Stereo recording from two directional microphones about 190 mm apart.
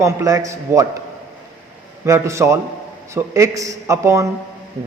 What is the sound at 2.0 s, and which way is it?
A man's voice, 15° right (ahead or behind).